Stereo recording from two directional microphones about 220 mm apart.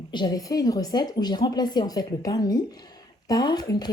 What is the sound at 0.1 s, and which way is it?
Speech, 20° left (ahead or behind).